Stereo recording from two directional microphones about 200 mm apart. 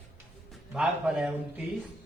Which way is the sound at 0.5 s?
5° right (ahead or behind).